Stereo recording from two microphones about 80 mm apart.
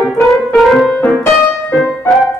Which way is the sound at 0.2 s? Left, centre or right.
Centre.